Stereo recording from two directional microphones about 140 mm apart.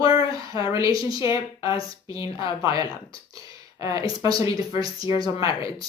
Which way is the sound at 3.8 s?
25° right (ahead or behind).